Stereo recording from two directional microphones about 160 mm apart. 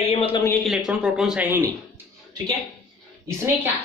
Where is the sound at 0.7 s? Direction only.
5° right (ahead or behind).